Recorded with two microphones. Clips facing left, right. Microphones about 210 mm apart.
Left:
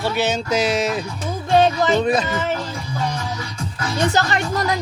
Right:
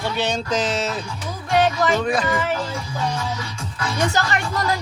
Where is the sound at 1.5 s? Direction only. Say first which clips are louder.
Left 3 dB; 25° left (ahead or behind).